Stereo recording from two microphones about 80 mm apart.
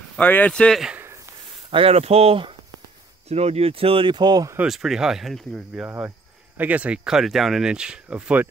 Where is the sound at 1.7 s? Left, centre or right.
Right.